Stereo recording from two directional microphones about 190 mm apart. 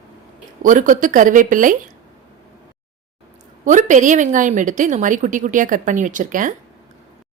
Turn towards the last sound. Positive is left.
turn(degrees=-45)  # may be behind; listen again after turning